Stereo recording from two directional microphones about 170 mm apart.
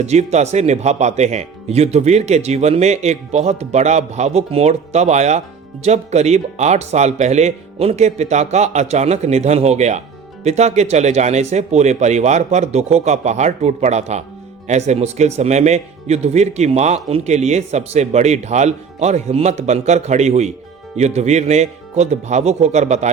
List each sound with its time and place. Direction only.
0.0 s speech: 40° right (ahead or behind)